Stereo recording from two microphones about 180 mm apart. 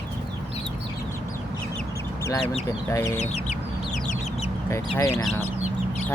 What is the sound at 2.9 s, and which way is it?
Speech, 15° left (ahead or behind).